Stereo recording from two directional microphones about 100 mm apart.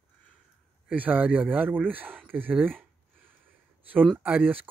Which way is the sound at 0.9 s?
15° right (ahead or behind).